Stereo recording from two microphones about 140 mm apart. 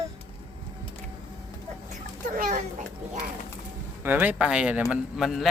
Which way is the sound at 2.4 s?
60° right (ahead or behind).